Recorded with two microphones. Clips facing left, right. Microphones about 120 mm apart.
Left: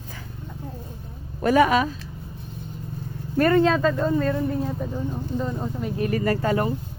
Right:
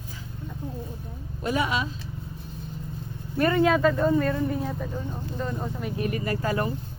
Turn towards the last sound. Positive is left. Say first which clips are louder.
# left 4 dB
turn(degrees=25)  # may be behind; listen again after turning